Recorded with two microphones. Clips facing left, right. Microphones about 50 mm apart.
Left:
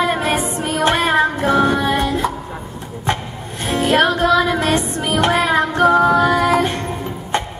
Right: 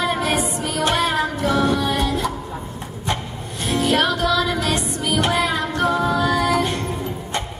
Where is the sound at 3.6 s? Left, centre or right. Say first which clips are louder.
Left 4 dB; left.